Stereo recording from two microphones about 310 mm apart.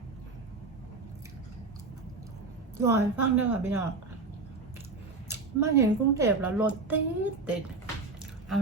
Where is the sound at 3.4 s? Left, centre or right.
Centre.